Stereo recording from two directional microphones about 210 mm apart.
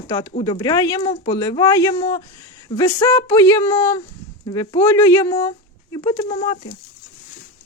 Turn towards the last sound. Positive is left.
turn(degrees=25)  # may be behind; listen again after turning